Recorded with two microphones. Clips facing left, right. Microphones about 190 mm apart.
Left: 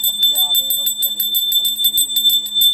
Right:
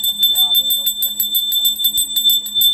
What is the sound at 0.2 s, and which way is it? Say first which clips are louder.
Bell: left 1 dB; 35° left (ahead or behind).